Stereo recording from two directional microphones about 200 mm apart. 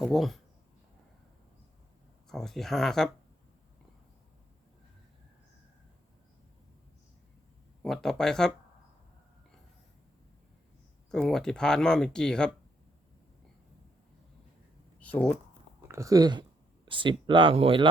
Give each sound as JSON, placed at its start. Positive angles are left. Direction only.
{"t": 0.0, "sound": "speech", "side_deg": 0}
{"t": 2.3, "sound": "speech", "side_deg": 0}
{"t": 7.8, "sound": "speech", "side_deg": 0}
{"t": 11.1, "sound": "speech", "side_deg": 0}
{"t": 14.9, "sound": "a sound", "side_deg": 5}
{"t": 15.9, "sound": "speech", "side_deg": -15}